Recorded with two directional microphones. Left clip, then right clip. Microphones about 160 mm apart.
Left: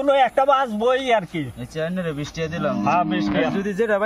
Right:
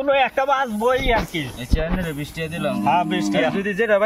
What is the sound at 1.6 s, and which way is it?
Speech, centre (ahead or behind).